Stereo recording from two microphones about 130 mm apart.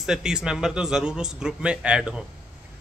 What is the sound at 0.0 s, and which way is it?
A man's voice, 5° right (ahead or behind).